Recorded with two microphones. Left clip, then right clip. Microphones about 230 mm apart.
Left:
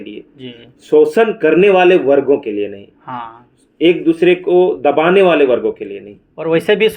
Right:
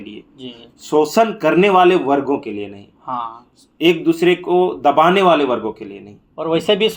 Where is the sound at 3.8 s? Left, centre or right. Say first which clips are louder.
Left 3 dB; right.